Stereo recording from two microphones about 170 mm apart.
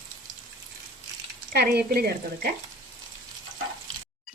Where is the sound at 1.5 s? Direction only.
70° right (ahead or behind).